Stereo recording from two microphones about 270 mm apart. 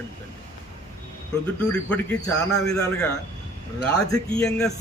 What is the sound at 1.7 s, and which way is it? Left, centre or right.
Speech, centre.